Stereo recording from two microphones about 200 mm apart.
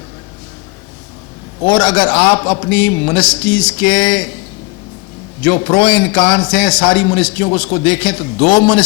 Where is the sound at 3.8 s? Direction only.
5° left (ahead or behind).